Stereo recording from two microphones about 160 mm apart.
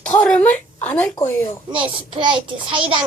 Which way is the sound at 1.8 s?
30° right (ahead or behind).